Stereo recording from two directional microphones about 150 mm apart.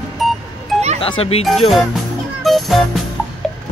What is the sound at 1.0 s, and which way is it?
Speech, 40° left (ahead or behind).